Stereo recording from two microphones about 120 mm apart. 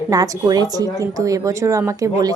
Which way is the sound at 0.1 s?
35° right (ahead or behind).